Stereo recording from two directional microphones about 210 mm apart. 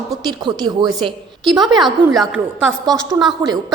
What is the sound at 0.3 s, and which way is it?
Speech, 20° right (ahead or behind).